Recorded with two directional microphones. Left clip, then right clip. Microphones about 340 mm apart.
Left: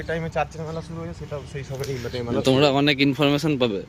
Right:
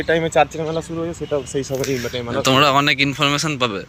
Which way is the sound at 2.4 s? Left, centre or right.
Centre.